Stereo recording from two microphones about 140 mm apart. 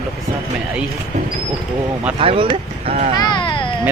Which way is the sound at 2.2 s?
40° right (ahead or behind).